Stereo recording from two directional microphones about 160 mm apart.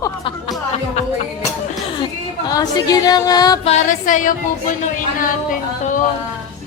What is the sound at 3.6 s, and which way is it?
Speech, 50° left (ahead or behind).